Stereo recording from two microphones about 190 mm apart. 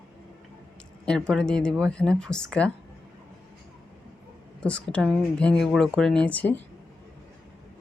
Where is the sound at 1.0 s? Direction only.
5° left (ahead or behind).